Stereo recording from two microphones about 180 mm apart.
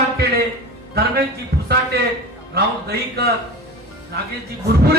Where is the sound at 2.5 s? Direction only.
60° right (ahead or behind).